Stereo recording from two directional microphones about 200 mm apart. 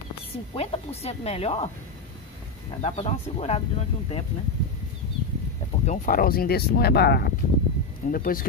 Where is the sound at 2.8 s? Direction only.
30° left (ahead or behind).